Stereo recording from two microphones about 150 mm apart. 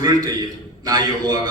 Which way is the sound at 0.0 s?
25° right (ahead or behind).